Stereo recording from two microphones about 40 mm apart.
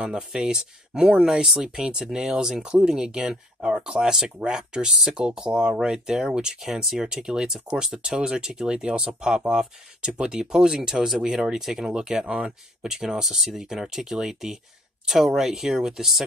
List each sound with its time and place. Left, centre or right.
0.0 s speech: right
2.0 s speech: centre